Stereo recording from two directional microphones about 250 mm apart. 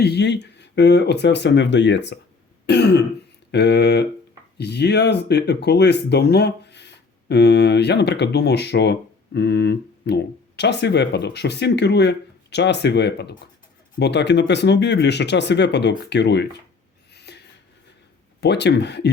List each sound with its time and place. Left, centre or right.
0.0 s speech: left
2.6 s throat clearing: left
3.5 s speech: left
17.2 s a sound: left
18.3 s speech: left